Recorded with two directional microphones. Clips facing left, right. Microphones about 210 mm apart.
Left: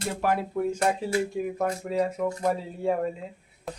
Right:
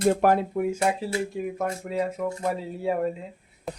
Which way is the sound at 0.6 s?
10° right (ahead or behind).